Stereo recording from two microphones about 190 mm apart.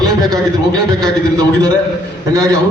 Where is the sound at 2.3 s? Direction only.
20° right (ahead or behind).